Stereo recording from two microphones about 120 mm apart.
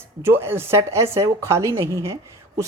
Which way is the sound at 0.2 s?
20° right (ahead or behind).